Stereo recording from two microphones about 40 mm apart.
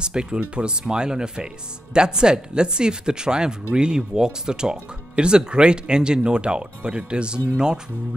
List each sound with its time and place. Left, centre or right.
0.0 s speech: right